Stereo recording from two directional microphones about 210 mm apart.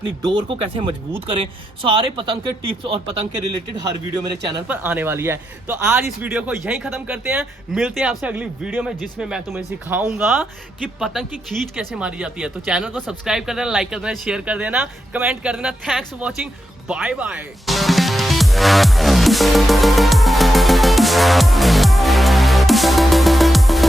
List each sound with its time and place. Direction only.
0.2 s speech: 20° right (ahead or behind)
2.0 s speech: 25° right (ahead or behind)
3.8 s speech: 20° right (ahead or behind)
4.7 s a man's voice: 10° right (ahead or behind)
16.9 s music: 5° right (ahead or behind)